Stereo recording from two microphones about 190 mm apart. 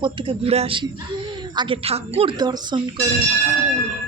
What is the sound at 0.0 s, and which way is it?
A woman's voice, 25° right (ahead or behind).